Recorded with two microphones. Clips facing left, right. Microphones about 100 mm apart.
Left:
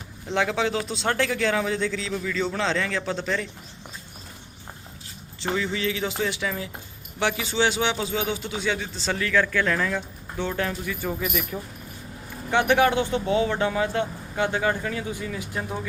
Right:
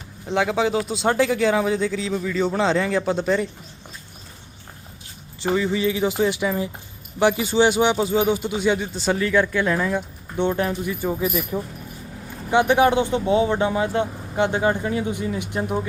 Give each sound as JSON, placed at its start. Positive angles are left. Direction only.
{"t": 0.3, "sound": "speech", "side_deg": -5}
{"t": 5.4, "sound": "speech", "side_deg": -10}